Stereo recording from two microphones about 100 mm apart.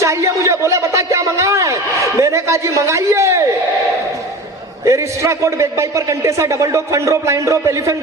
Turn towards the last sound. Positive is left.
turn(degrees=-30)  # may be behind; listen again after turning